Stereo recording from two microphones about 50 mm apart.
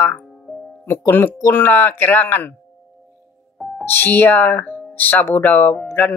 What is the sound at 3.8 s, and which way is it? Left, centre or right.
Speech, left.